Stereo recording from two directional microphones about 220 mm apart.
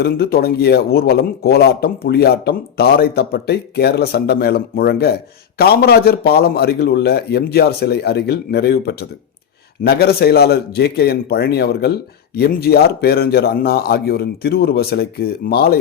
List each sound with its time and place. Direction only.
0.0 s a man's voice: 45° left (ahead or behind)